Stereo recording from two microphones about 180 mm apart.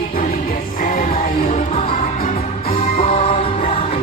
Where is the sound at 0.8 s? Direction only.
50° left (ahead or behind).